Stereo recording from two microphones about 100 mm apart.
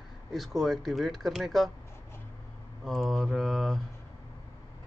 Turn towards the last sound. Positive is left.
turn(degrees=0)  # may be behind; listen again after turning